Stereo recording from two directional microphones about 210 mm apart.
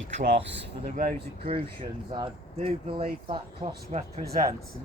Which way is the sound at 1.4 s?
25° right (ahead or behind).